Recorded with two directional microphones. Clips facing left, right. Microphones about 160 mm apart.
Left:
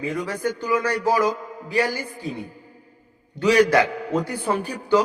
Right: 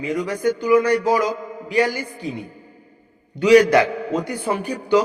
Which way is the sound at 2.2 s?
20° right (ahead or behind).